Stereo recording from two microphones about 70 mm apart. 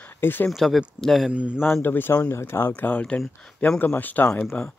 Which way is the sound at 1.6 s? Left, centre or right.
Left.